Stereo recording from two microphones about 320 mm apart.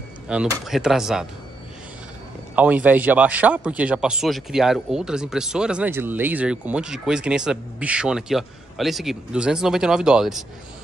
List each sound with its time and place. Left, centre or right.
0.3 s speech: centre
2.5 s speech: centre